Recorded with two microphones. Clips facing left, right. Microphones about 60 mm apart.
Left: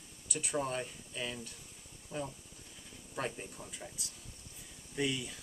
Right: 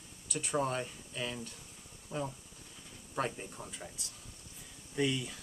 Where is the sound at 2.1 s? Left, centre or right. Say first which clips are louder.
Right 2 dB; right.